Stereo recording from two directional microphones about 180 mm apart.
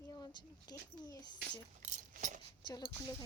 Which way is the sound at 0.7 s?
20° left (ahead or behind).